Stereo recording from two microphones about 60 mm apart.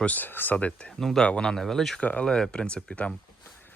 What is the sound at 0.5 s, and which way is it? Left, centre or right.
Speech, centre.